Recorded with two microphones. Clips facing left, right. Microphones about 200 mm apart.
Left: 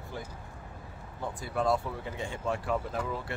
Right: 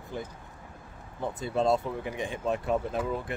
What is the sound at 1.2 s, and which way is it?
Speech, 25° right (ahead or behind).